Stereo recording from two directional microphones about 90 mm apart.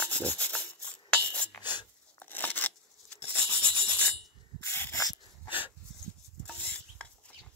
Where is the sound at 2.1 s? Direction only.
20° left (ahead or behind).